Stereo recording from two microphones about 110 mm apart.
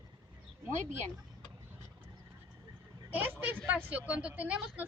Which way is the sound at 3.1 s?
15° right (ahead or behind).